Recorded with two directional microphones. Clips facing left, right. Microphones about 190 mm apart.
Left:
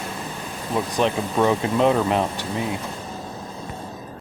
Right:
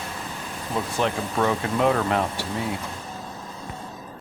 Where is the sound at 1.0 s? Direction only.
20° left (ahead or behind).